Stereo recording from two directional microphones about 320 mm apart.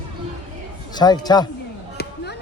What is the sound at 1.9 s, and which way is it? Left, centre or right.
Chop, left.